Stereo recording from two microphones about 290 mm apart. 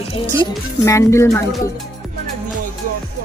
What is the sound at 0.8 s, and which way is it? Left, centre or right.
Speech, centre.